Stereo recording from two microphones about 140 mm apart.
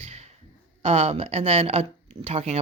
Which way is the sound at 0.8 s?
50° right (ahead or behind).